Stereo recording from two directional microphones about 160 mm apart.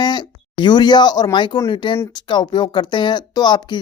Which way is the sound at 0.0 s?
25° left (ahead or behind).